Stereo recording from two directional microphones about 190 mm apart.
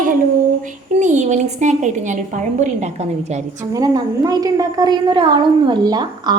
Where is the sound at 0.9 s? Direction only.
40° right (ahead or behind).